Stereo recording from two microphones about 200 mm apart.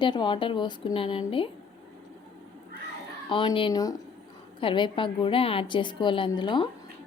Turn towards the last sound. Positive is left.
turn(degrees=25)  # may be behind; listen again after turning